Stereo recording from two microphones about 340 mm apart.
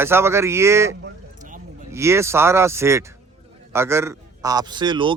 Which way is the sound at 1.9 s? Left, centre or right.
Centre.